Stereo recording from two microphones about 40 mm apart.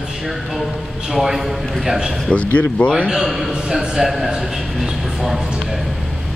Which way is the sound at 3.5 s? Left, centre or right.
Centre.